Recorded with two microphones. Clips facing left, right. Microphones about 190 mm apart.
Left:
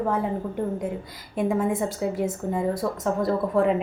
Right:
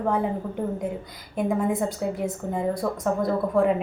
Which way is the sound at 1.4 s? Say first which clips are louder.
Even; centre (ahead or behind).